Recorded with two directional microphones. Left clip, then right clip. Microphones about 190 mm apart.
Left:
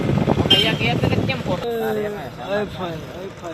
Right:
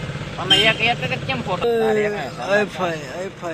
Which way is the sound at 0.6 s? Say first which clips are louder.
Right 3 dB; 20° right (ahead or behind).